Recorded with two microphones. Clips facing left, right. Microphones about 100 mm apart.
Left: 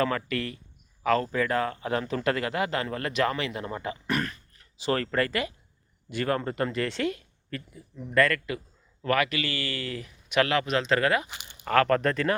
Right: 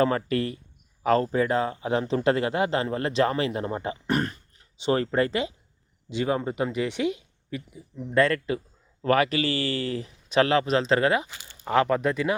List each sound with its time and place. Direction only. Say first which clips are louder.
0.3 s speech: right 5 dB; 30° right (ahead or behind); by 8.0 s 15° right (ahead or behind)
8.1 s speech: right 2 dB; 25° right (ahead or behind)
11.3 s a sound: left 1 dB; 20° left (ahead or behind)
11.6 s speech: even; 15° right (ahead or behind)